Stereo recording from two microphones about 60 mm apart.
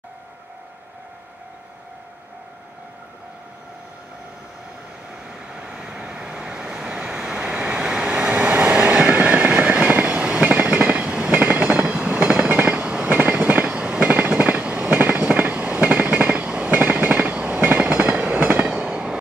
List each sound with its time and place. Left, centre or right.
5.1 s vehicle: centre
10.9 s train: centre
14.0 s train: right